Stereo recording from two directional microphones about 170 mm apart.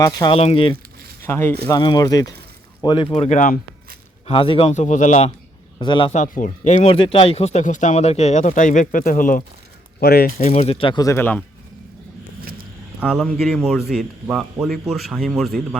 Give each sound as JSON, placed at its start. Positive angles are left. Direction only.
{"t": 0.0, "sound": "speech", "side_deg": 20}
{"t": 0.3, "sound": "a man's voice", "side_deg": 35}
{"t": 1.2, "sound": "speech", "side_deg": 15}
{"t": 1.8, "sound": "a man's voice", "side_deg": 25}
{"t": 4.3, "sound": "a man's voice", "side_deg": 30}
{"t": 5.8, "sound": "speech", "side_deg": 25}
{"t": 6.1, "sound": "speech", "side_deg": 50}
{"t": 6.8, "sound": "speech", "side_deg": 30}
{"t": 10.0, "sound": "speech", "side_deg": 65}
{"t": 10.3, "sound": "speech", "side_deg": 40}
{"t": 13.0, "sound": "a man's voice", "side_deg": -5}